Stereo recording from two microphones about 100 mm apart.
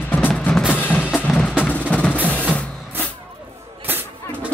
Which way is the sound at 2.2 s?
15° left (ahead or behind).